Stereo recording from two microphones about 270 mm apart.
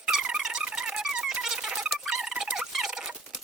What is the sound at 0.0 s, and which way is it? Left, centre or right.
Squeak, centre.